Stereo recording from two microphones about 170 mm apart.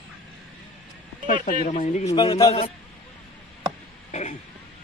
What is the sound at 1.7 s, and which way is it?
Speech, 45° left (ahead or behind).